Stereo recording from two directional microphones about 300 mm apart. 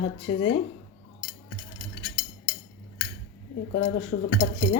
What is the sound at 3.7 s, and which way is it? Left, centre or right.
Dishes, left.